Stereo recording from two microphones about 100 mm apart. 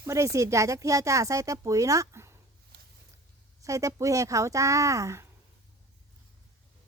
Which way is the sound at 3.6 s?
30° right (ahead or behind).